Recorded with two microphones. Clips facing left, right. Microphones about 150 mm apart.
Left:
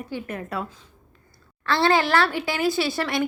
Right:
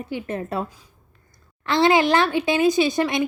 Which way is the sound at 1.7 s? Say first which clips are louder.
Right 3 dB; 15° right (ahead or behind).